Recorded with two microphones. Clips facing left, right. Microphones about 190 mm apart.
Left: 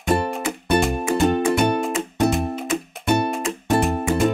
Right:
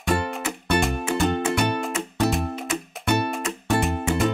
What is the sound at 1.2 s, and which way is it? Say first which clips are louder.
Music: left 5 dB; 15° left (ahead or behind).